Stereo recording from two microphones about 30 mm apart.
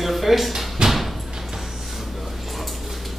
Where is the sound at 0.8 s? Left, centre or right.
Right.